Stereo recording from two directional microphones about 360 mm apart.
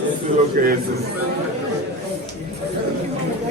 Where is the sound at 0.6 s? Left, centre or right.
Right.